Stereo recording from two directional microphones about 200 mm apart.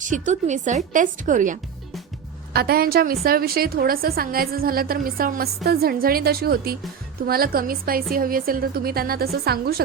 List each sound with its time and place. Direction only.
0.0 s a woman's voice: 40° right (ahead or behind)
2.5 s a woman's voice: 50° right (ahead or behind)